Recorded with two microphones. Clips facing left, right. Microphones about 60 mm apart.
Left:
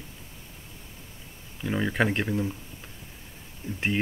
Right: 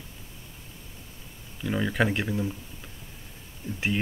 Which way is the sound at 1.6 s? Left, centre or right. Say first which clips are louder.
Even; centre.